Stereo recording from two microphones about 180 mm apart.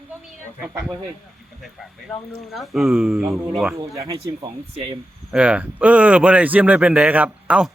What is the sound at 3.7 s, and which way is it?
Speech, 15° right (ahead or behind).